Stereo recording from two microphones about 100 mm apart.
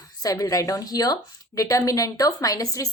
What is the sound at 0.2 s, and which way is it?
A woman's voice, 35° left (ahead or behind).